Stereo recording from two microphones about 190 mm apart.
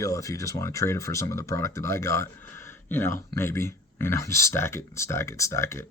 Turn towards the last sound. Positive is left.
turn(degrees=15)  # may be behind; listen again after turning